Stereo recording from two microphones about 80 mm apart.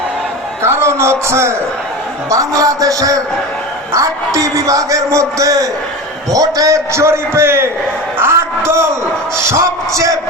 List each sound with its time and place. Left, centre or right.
0.6 s a man's voice: right
2.3 s a man's voice: right